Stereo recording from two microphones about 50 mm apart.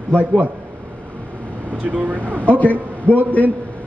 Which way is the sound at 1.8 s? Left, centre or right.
Right.